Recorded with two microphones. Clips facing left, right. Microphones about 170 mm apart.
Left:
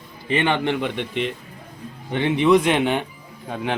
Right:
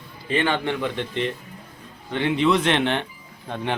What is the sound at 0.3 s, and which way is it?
Speech, 20° left (ahead or behind).